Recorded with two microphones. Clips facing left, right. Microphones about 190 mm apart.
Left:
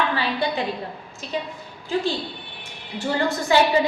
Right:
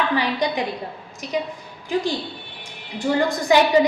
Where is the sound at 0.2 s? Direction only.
15° right (ahead or behind).